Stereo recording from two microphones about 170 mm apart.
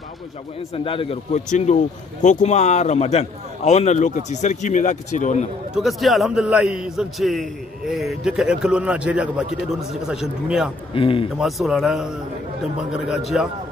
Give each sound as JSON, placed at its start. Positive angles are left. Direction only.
{"t": 0.8, "sound": "a man's voice", "side_deg": 35}
{"t": 5.8, "sound": "a man's voice", "side_deg": 0}
{"t": 10.9, "sound": "a man's voice", "side_deg": 30}
{"t": 11.3, "sound": "a man's voice", "side_deg": 0}